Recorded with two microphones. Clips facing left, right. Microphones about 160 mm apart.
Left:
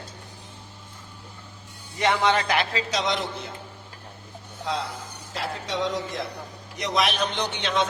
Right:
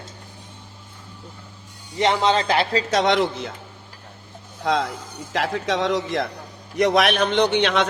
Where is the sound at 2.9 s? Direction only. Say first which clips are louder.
Right 11 dB; 65° right (ahead or behind).